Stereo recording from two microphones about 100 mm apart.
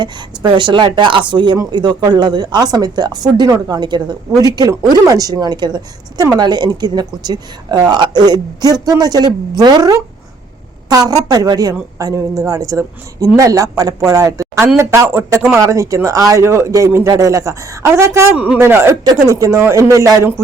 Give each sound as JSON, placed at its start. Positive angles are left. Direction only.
{"t": 0.0, "sound": "a woman's voice", "side_deg": -55}
{"t": 15.4, "sound": "speech", "side_deg": -5}
{"t": 15.6, "sound": "a woman's voice", "side_deg": -30}
{"t": 18.3, "sound": "a woman's voice", "side_deg": -15}